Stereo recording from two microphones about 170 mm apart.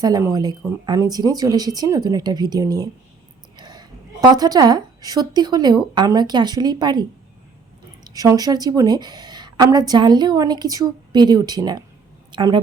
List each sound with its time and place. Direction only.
0.0 s a woman's voice: 20° right (ahead or behind)
8.1 s a woman's voice: 20° right (ahead or behind)